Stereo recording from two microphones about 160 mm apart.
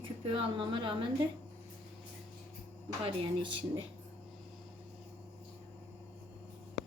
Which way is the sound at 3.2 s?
30° right (ahead or behind).